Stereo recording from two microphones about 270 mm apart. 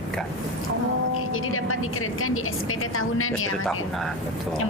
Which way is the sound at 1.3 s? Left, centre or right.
Left.